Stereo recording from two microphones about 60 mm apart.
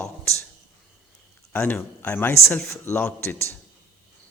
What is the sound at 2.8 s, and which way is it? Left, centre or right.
Speech, left.